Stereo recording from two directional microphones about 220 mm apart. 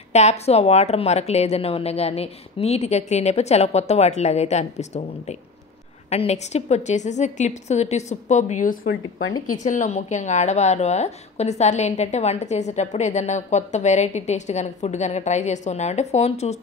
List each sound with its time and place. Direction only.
0.1 s a woman's voice: 30° left (ahead or behind)
6.0 s a woman's voice: 30° left (ahead or behind)